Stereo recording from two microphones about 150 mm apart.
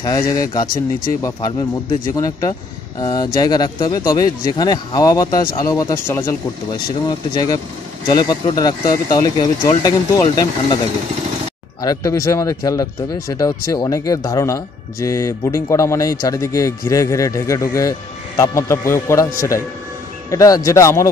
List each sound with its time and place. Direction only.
0.0 s speech: 25° left (ahead or behind)
11.8 s speech: 25° left (ahead or behind)